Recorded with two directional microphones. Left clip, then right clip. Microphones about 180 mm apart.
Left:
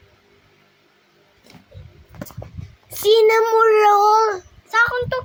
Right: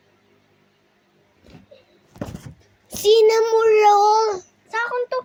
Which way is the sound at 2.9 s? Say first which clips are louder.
Left 1 dB; 25° left (ahead or behind).